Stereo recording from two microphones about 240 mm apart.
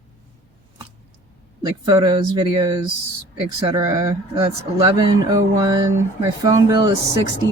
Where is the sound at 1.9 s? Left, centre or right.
Centre.